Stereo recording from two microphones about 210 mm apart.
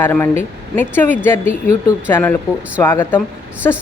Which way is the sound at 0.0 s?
10° left (ahead or behind).